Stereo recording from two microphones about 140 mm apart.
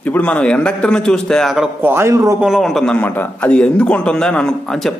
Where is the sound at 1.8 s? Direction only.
15° right (ahead or behind).